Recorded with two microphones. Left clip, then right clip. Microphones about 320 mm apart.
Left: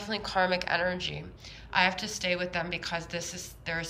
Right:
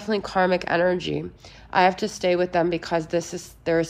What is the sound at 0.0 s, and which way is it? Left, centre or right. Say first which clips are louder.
A woman's voice: right 6 dB; centre.